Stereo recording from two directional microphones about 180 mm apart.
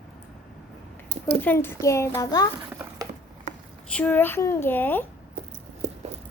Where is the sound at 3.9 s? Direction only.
10° left (ahead or behind).